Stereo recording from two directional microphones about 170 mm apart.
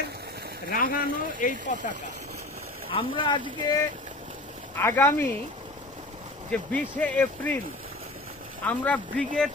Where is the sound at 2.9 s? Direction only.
30° left (ahead or behind).